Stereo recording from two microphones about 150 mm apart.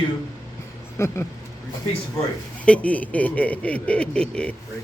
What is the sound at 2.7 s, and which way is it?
Speech, 10° left (ahead or behind).